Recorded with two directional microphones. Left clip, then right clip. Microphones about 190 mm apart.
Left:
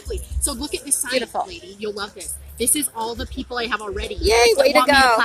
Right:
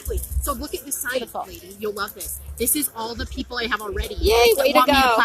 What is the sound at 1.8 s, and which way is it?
Speech, 25° left (ahead or behind).